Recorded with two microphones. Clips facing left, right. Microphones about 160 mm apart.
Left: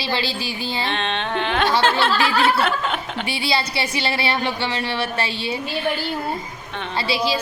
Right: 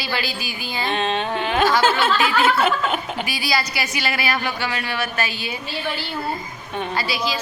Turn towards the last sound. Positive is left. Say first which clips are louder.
# left 2 dB
turn(degrees=30)  # may be behind; listen again after turning